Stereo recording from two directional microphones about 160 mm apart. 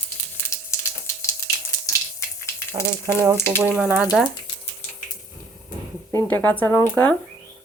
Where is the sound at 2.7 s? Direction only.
15° right (ahead or behind).